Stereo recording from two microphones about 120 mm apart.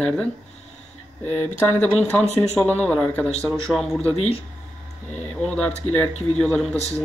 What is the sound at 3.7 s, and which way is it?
Speech, centre (ahead or behind).